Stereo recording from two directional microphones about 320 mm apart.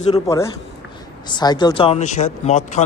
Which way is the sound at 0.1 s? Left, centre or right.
Centre.